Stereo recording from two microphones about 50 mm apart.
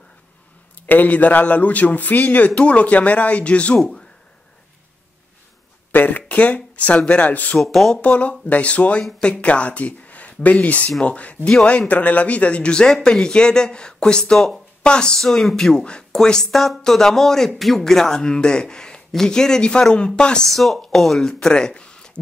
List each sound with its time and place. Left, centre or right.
0.8 s a man's voice: left
3.7 s speech: centre
5.9 s speech: left
7.5 s speech: centre
8.0 s speech: left
15.1 s speech: centre
20.4 s speech: centre